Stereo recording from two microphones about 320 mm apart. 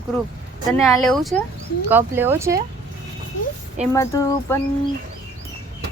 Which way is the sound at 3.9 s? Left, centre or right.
Centre.